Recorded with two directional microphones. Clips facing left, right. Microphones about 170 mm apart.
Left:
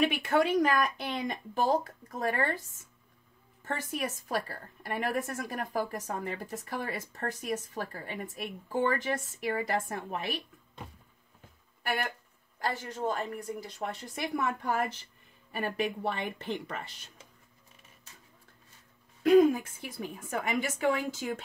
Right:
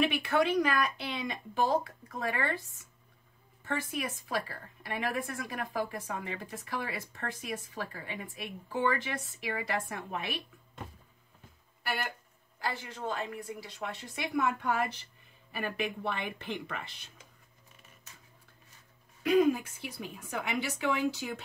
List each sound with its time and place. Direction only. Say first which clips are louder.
0.0 s a woman's voice: left 1 dB; 45° left (ahead or behind)
3.6 s a woman's voice: left 1 dB; 40° left (ahead or behind)
11.8 s a woman's voice: left 3 dB; 50° left (ahead or behind)
19.2 s a woman's voice: left 4 dB; 45° left (ahead or behind)